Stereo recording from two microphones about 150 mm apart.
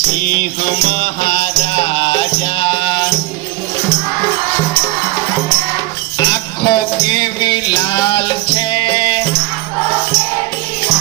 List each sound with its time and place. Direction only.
0.3 s music: 60° left (ahead or behind); by 3.1 s 30° left (ahead or behind)
6.1 s music: 25° left (ahead or behind)